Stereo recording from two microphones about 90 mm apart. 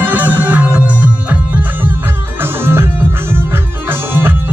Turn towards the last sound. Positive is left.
turn(degrees=-25)  # may be behind; listen again after turning